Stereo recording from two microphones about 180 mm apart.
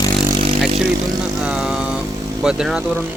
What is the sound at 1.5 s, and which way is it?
Vehicle, 5° right (ahead or behind).